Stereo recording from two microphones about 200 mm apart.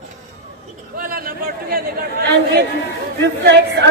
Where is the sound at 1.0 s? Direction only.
45° right (ahead or behind).